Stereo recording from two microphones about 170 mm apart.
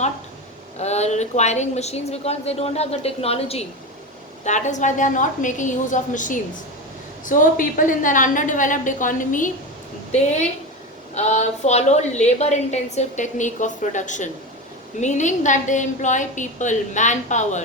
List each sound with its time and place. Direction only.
0.8 s a woman's voice: 40° left (ahead or behind)
11.1 s a woman's voice: 40° left (ahead or behind)